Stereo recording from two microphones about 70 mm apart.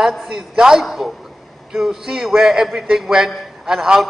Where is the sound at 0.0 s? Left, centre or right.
Centre.